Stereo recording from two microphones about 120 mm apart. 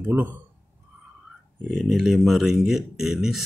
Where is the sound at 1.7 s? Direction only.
Centre (ahead or behind).